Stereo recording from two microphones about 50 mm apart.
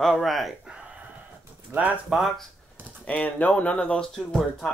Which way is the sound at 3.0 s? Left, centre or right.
Left.